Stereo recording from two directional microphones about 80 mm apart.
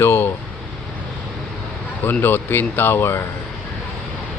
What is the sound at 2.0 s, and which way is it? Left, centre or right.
Speech, left.